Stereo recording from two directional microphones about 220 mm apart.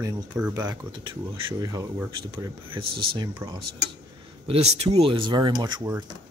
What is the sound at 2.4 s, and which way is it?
Speech, 25° right (ahead or behind).